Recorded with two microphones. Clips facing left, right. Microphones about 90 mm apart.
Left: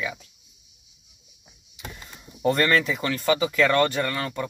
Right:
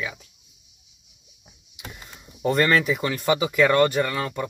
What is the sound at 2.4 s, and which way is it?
Speech, 5° right (ahead or behind).